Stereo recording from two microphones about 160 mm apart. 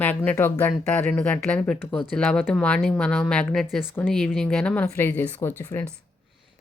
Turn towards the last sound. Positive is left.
turn(degrees=15)  # may be behind; listen again after turning